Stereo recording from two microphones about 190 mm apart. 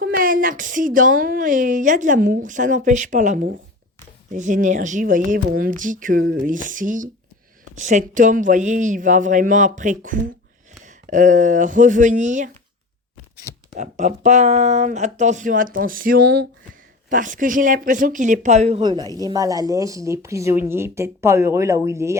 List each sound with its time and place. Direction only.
0.0 s a woman's voice: 50° right (ahead or behind)
13.7 s speech: 40° right (ahead or behind); by 16.5 s 60° right (ahead or behind)
17.1 s a woman's voice: 45° right (ahead or behind)
18.8 s a woman's voice: 20° right (ahead or behind)